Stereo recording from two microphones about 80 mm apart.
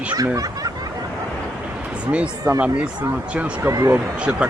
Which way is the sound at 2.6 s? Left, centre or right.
Right.